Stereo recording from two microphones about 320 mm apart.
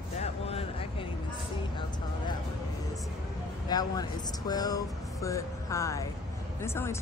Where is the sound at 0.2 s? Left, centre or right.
Centre.